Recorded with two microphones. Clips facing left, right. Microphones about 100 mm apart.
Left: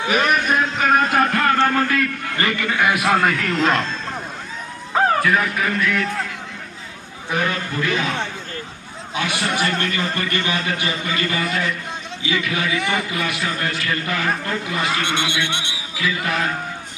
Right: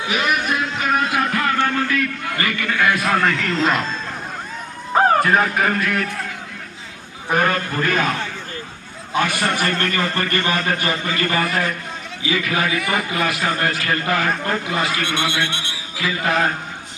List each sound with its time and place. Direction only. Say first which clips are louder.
0.1 s music: left 2 dB; 45° left (ahead or behind)
1.6 s a sound: left 2 dB; 45° left (ahead or behind); by 3.2 s 20° left (ahead or behind)
3.6 s speech: left 1 dB; centre (ahead or behind)
5.2 s a man's voice: right 2 dB; 45° right (ahead or behind)
7.3 s a man's voice: right 4 dB; 50° right (ahead or behind)
9.1 s a man's voice: right 3 dB; 45° right (ahead or behind)
14.8 s a man's voice: even; 25° left (ahead or behind)
16.0 s a man's voice: right 3 dB; 40° right (ahead or behind)